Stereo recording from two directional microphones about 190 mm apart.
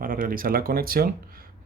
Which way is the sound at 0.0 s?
45° right (ahead or behind).